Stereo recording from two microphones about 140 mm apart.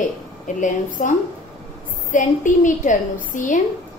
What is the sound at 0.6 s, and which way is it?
A woman's voice, 65° left (ahead or behind).